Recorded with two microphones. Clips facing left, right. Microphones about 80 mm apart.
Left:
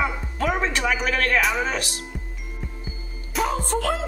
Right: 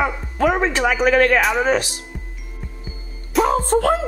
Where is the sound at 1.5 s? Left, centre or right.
Right.